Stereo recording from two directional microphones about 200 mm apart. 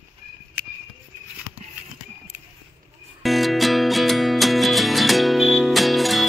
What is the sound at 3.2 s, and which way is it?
Music, centre (ahead or behind).